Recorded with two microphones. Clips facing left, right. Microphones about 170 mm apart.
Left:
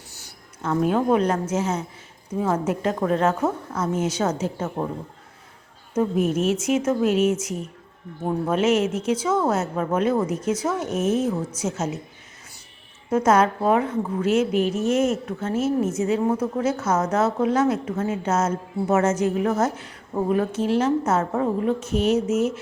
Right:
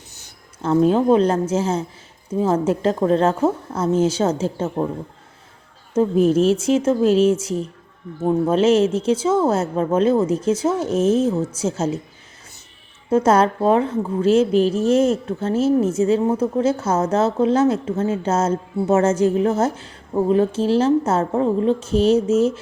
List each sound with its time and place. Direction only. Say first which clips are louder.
0.1 s a woman's voice: left 1 dB; 25° right (ahead or behind)
5.9 s a woman's voice: right 6 dB; 30° right (ahead or behind)
13.1 s a woman's voice: right 3 dB; 30° right (ahead or behind)